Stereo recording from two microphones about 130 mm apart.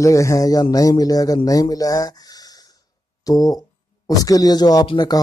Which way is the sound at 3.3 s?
25° left (ahead or behind).